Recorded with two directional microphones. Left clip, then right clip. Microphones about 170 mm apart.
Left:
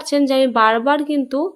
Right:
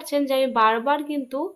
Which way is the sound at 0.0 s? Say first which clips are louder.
Left 6 dB; 35° left (ahead or behind).